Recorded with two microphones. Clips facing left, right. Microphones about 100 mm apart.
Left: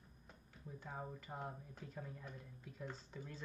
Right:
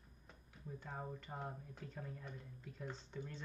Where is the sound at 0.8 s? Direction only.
Centre (ahead or behind).